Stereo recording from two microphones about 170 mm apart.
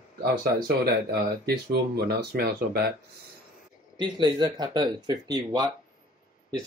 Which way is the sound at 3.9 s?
25° right (ahead or behind).